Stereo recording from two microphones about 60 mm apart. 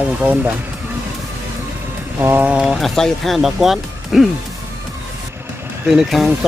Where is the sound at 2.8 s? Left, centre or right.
Centre.